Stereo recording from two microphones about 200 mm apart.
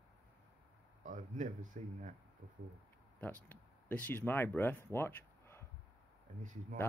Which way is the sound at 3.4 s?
10° left (ahead or behind).